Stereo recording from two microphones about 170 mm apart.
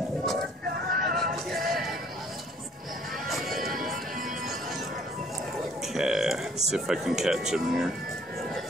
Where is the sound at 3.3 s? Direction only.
Centre (ahead or behind).